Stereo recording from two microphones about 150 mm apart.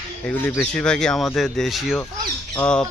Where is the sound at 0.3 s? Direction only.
15° left (ahead or behind).